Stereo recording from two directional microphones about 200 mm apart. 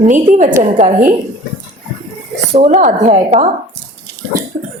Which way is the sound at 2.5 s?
35° right (ahead or behind).